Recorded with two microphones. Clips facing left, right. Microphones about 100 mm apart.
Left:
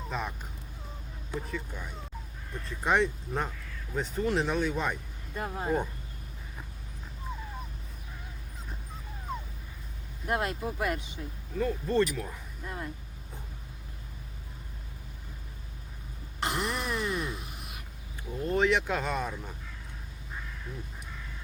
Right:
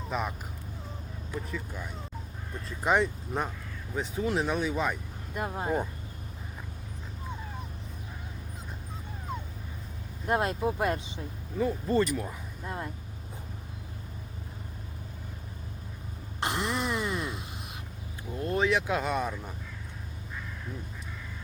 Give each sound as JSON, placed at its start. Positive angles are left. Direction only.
{"t": 0.1, "sound": "speech", "side_deg": -5}
{"t": 1.5, "sound": "speech", "side_deg": 0}
{"t": 5.3, "sound": "speech", "side_deg": -15}
{"t": 10.2, "sound": "speech", "side_deg": -25}
{"t": 11.5, "sound": "speech", "side_deg": -5}
{"t": 12.6, "sound": "speech", "side_deg": -25}
{"t": 16.4, "sound": "wail", "side_deg": -20}
{"t": 17.2, "sound": "a sound", "side_deg": -20}
{"t": 18.3, "sound": "a sound", "side_deg": 0}